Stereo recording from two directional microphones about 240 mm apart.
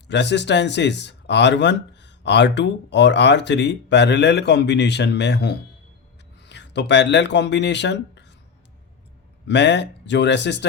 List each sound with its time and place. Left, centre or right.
0.1 s speech: left
9.5 s speech: left